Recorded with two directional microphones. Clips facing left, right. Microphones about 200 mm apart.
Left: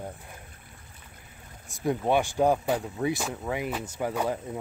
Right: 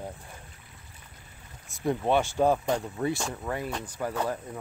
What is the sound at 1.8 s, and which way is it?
Speech, centre (ahead or behind).